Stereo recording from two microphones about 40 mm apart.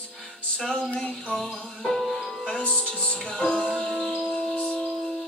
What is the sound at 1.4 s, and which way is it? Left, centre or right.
Music, centre.